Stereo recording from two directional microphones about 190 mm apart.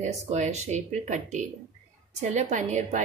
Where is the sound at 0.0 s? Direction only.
40° right (ahead or behind).